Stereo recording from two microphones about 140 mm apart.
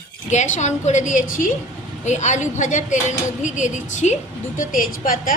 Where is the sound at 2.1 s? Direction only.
55° left (ahead or behind); by 5.3 s 80° left.